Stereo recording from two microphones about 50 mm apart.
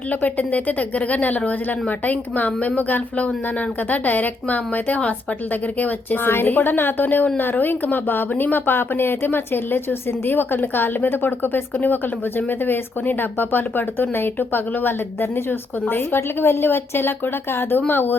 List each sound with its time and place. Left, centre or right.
0.1 s speech: left
5.8 s speech: left